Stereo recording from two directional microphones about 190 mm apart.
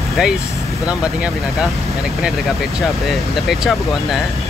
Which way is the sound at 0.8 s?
5° right (ahead or behind).